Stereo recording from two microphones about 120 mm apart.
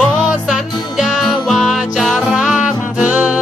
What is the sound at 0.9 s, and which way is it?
Music, 5° right (ahead or behind).